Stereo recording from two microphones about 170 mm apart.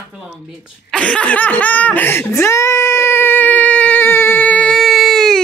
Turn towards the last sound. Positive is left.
turn(degrees=0)  # may be behind; listen again after turning